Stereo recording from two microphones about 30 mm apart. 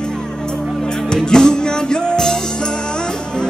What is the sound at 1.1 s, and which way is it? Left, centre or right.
Music, left.